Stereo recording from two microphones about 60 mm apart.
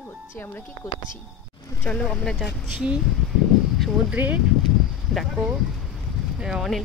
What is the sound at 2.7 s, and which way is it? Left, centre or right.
Speech, centre.